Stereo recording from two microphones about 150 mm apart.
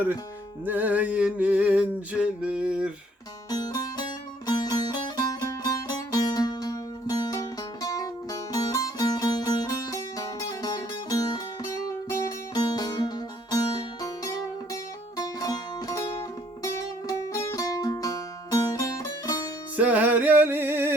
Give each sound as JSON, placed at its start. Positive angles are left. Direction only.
{"t": 0.6, "sound": "music", "side_deg": -10}
{"t": 3.5, "sound": "music", "side_deg": 25}
{"t": 15.2, "sound": "music", "side_deg": 25}
{"t": 19.7, "sound": "music", "side_deg": -10}